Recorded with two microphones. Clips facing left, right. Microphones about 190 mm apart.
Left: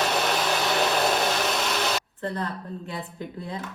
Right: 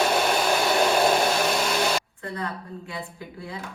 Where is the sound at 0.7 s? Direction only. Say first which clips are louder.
Right 3 dB; centre (ahead or behind).